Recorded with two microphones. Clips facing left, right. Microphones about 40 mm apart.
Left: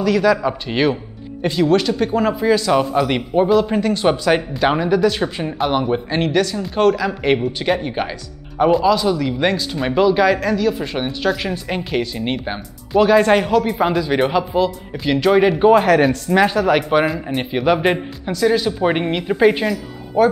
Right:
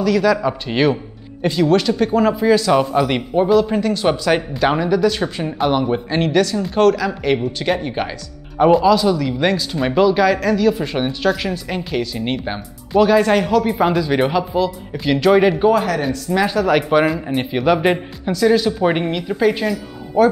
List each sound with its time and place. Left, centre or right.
0.0 s speech: centre
11.5 s speech: centre
12.2 s speech: centre
15.6 s a woman's voice: left
16.5 s speech: centre
19.1 s a woman's voice: left
19.6 s speech: centre